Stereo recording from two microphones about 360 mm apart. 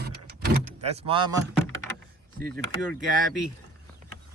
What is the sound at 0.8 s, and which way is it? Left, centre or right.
Speech, centre.